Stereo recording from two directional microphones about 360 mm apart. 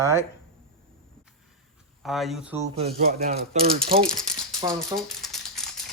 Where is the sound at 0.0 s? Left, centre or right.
Centre.